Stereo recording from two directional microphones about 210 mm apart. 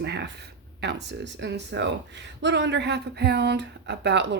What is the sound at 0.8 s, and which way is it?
Speech, 55° right (ahead or behind).